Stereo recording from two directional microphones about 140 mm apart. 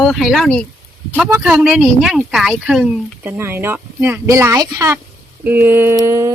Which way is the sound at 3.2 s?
15° right (ahead or behind).